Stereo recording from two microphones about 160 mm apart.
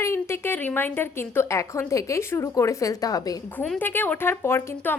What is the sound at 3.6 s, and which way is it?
A woman's voice, 10° left (ahead or behind).